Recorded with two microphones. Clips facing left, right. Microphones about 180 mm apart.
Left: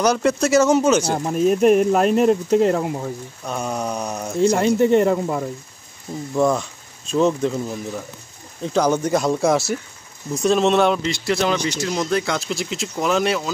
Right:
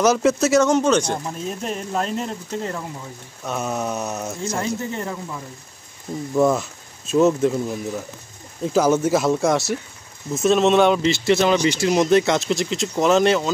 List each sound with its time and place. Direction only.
0.0 s speech: centre (ahead or behind)
1.1 s speech: 65° left (ahead or behind)
3.4 s speech: 5° right (ahead or behind)
4.4 s speech: 70° left (ahead or behind)
6.3 s speech: 5° right (ahead or behind)
11.9 s speech: 20° right (ahead or behind)
12.4 s speech: centre (ahead or behind)